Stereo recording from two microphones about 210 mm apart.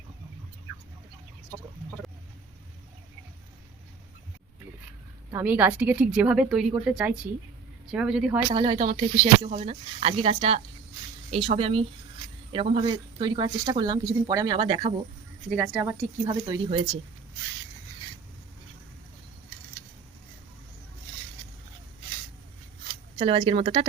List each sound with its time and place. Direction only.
5.3 s speech: 10° right (ahead or behind)
8.4 s speech: 20° right (ahead or behind)
15.4 s speech: 5° right (ahead or behind); by 17.0 s 25° right (ahead or behind)
23.1 s speech: 25° right (ahead or behind)